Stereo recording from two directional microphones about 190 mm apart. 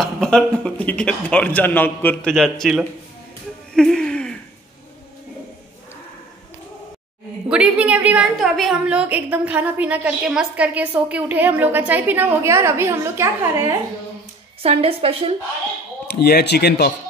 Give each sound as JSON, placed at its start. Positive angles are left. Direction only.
{"t": 0.0, "sound": "a man's voice", "side_deg": 5}
{"t": 3.7, "sound": "a sound", "side_deg": 5}
{"t": 7.4, "sound": "a woman's voice", "side_deg": -5}
{"t": 14.6, "sound": "a woman's voice", "side_deg": -30}
{"t": 16.1, "sound": "speech", "side_deg": 55}